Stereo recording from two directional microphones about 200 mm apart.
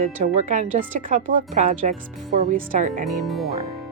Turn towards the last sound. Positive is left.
turn(degrees=0)  # may be behind; listen again after turning